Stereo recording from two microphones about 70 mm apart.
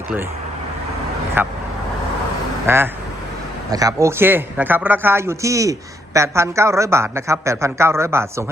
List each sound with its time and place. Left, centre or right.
1.4 s speech: right
2.6 s speech: right
3.7 s speech: right
4.2 s speech: right